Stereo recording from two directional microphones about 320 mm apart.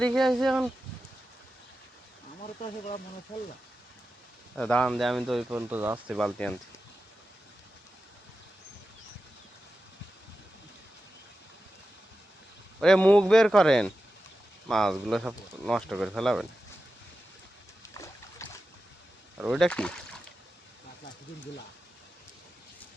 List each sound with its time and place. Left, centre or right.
0.0 s speech: centre
2.4 s speech: left
4.5 s speech: centre
12.8 s speech: centre
17.9 s boat: centre
19.4 s speech: centre